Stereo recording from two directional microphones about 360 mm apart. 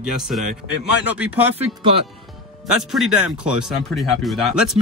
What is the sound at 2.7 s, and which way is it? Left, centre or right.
Speech, centre.